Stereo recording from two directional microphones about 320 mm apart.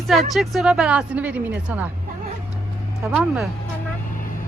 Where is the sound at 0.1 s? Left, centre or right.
Centre.